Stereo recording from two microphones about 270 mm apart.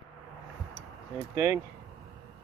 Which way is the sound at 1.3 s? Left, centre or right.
Centre.